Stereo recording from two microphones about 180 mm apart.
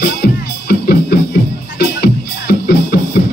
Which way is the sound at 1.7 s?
60° left (ahead or behind).